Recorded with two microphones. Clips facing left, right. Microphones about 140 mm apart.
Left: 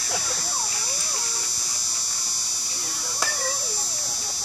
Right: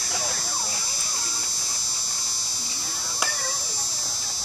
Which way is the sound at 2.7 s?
65° left (ahead or behind).